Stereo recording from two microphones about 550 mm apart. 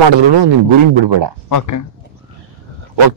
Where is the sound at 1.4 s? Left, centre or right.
Left.